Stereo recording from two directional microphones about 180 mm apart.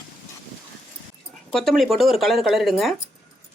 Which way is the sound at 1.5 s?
Centre (ahead or behind).